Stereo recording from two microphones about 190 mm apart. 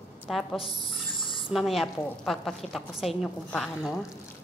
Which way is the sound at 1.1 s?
25° left (ahead or behind).